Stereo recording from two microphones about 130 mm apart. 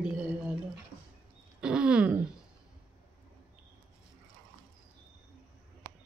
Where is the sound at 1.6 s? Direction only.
5° right (ahead or behind).